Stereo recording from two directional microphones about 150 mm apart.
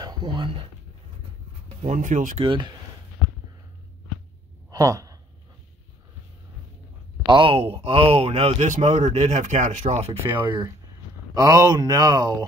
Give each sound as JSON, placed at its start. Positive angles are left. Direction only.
{"t": 0.0, "sound": "speech", "side_deg": -30}
{"t": 1.8, "sound": "speech", "side_deg": -55}
{"t": 2.4, "sound": "speech", "side_deg": -35}
{"t": 4.6, "sound": "sigh", "side_deg": -25}
{"t": 7.2, "sound": "speech", "side_deg": -35}
{"t": 8.6, "sound": "speech", "side_deg": -50}
{"t": 11.3, "sound": "speech", "side_deg": -25}